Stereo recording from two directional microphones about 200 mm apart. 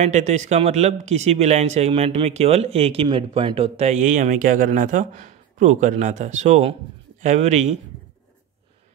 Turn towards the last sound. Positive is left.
turn(degrees=-35)  # may be behind; listen again after turning